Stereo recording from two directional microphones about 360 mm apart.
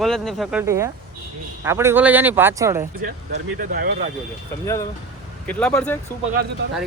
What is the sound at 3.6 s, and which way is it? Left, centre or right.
Speech, right.